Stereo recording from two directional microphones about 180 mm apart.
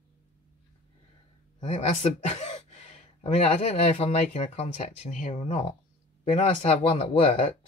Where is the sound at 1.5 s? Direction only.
40° left (ahead or behind).